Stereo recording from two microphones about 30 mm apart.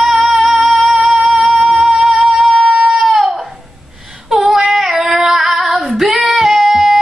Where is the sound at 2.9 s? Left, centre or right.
Centre.